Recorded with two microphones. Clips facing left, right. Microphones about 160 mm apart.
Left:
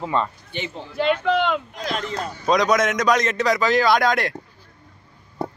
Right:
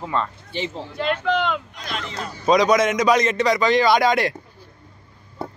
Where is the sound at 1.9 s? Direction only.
45° left (ahead or behind).